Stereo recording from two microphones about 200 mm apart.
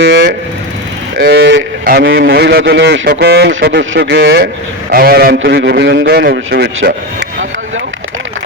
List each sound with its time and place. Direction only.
0.0 s speech: 60° right (ahead or behind)
1.8 s a man's voice: 45° right (ahead or behind)
2.0 s speech: 55° right (ahead or behind)
3.1 s speech: 50° right (ahead or behind)
4.9 s a man's voice: 45° right (ahead or behind)